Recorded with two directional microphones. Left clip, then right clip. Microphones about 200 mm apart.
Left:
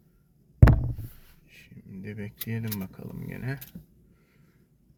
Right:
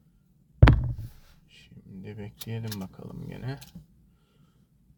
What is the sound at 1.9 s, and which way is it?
Speech, centre (ahead or behind).